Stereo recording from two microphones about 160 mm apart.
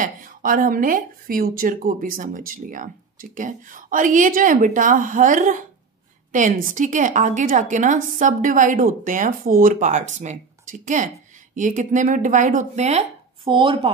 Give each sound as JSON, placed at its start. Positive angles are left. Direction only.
{"t": 0.0, "sound": "a woman's voice", "side_deg": -55}
{"t": 13.5, "sound": "speech", "side_deg": -30}